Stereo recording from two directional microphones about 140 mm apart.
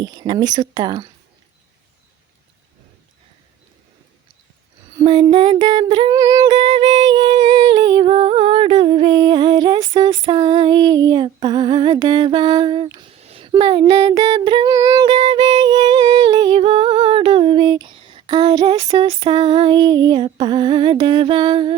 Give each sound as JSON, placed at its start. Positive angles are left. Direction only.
{"t": 0.0, "sound": "speech", "side_deg": -30}
{"t": 4.9, "sound": "music", "side_deg": -30}
{"t": 13.2, "sound": "a sound", "side_deg": -45}
{"t": 13.5, "sound": "female singing", "side_deg": -35}